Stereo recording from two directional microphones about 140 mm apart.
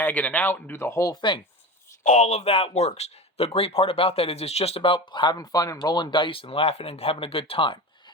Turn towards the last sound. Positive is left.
turn(degrees=40)  # may be behind; listen again after turning